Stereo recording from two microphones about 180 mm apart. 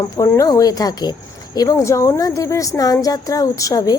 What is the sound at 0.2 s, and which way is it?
A woman's voice, 20° left (ahead or behind).